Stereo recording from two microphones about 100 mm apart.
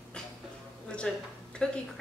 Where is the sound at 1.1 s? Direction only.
5° left (ahead or behind).